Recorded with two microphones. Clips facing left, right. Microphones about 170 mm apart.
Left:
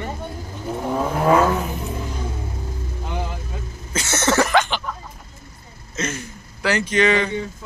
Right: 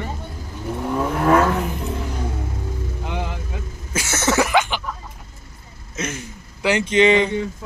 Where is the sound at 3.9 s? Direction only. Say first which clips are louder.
Left 1 dB; 5° right (ahead or behind).